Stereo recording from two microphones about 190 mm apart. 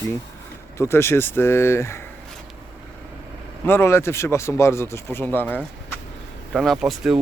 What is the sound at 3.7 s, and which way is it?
Speech, 15° left (ahead or behind).